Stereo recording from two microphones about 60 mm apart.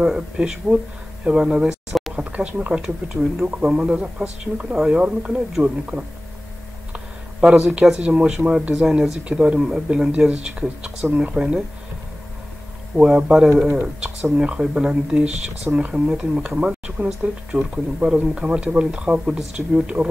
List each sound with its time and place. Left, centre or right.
0.0 s speech: centre
2.1 s speech: right
3.4 s speech: right
3.7 s speech: centre
4.7 s speech: centre
7.3 s speech: centre
8.7 s speech: centre
12.9 s speech: centre